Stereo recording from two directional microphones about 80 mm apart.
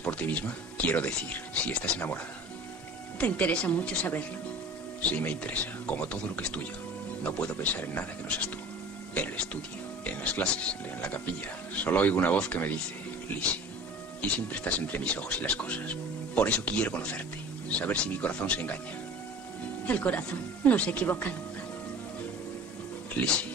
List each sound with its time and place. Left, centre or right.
0.0 s speech: centre
3.2 s speech: centre
14.2 s speech: centre
19.9 s speech: centre
23.2 s speech: centre